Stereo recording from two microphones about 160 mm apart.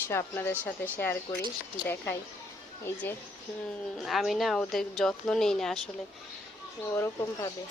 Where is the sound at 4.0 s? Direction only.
Centre (ahead or behind).